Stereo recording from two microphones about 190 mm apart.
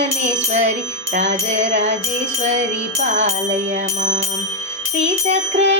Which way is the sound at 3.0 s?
40° right (ahead or behind).